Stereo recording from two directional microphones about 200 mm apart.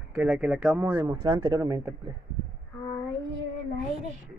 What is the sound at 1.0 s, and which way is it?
Speech, 15° right (ahead or behind).